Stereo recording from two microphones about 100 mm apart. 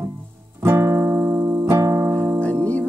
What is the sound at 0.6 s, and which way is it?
Music, 30° right (ahead or behind).